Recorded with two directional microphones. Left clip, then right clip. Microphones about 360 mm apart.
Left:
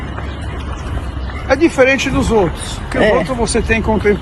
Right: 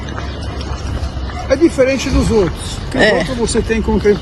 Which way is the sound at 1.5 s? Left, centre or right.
Left.